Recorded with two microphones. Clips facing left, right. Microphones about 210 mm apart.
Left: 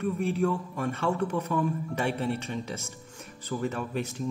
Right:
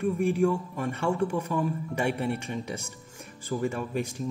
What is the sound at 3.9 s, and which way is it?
Speech, 50° right (ahead or behind).